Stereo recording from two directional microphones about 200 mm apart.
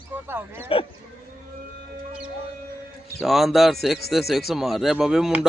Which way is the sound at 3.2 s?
Centre (ahead or behind).